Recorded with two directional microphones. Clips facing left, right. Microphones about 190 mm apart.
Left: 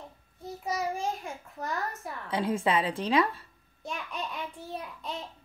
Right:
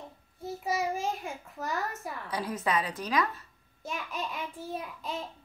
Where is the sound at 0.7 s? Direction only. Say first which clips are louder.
Even; 5° right (ahead or behind).